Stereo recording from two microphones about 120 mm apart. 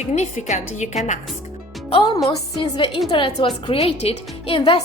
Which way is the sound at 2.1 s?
30° left (ahead or behind).